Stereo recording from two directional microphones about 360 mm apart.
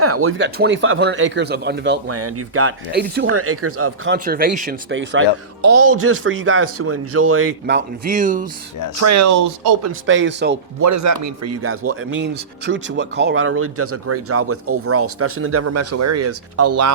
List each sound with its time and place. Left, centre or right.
0.0 s speech: right
9.0 s speech: right
10.1 s speech: right
10.8 s speech: right